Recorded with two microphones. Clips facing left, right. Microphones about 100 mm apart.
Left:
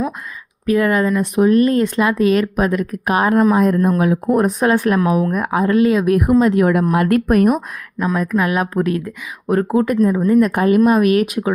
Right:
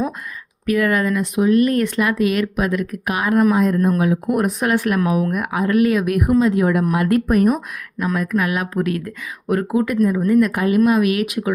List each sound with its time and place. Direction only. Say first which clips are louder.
0.6 s speech: left 2 dB; 25° left (ahead or behind)
1.2 s speech: left 2 dB; 40° left (ahead or behind)
1.7 s speech: left 3 dB; 25° left (ahead or behind); by 4.2 s 50° left (ahead or behind)
4.3 s speech: left 4 dB; 30° left (ahead or behind)
6.4 s speech: left 3 dB; 60° left (ahead or behind)
7.9 s speech: left 2 dB; 35° left (ahead or behind)
10.0 s speech: left 2 dB; 30° left (ahead or behind)
10.4 s speech: left 3 dB; 45° left (ahead or behind)